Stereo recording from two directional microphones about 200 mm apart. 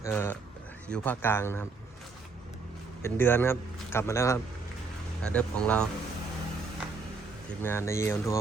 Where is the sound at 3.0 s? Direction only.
10° left (ahead or behind).